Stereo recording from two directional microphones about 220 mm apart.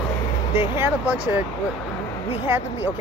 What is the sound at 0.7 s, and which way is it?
Speech, 10° right (ahead or behind).